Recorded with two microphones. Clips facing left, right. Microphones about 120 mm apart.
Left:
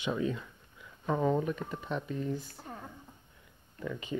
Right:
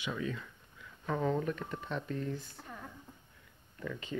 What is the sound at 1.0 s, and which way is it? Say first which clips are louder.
Speech: left 3 dB; 15° left (ahead or behind).